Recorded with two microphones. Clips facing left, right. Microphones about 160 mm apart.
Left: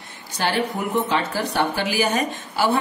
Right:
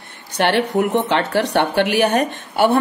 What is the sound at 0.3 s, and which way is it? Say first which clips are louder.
Speech: right 6 dB; 65° right (ahead or behind).